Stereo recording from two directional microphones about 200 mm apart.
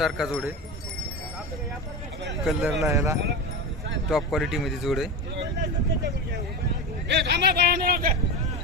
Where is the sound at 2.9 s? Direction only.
15° right (ahead or behind).